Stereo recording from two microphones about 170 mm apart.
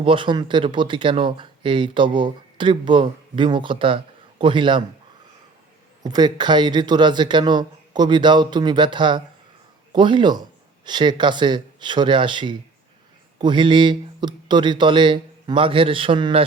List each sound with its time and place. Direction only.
0.0 s speech: 30° right (ahead or behind)
6.0 s speech: 25° right (ahead or behind)